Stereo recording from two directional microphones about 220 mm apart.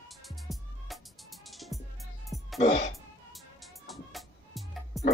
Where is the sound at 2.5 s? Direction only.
35° left (ahead or behind).